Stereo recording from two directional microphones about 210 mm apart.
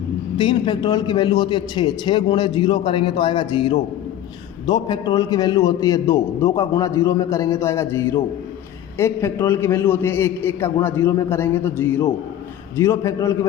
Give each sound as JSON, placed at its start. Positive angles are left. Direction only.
{"t": 0.3, "sound": "a man's voice", "side_deg": 20}